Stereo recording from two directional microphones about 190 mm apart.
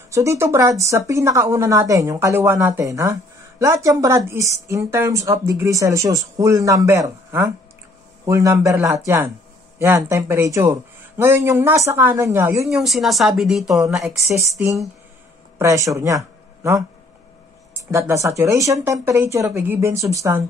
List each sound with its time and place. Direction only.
0.1 s speech: 15° right (ahead or behind)
12.6 s speech: centre (ahead or behind)
14.2 s speech: 15° right (ahead or behind)
15.6 s speech: 15° right (ahead or behind)
17.9 s speech: 15° right (ahead or behind)